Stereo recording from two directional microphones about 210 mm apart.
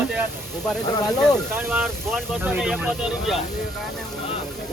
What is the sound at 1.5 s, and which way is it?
Speech, 10° right (ahead or behind).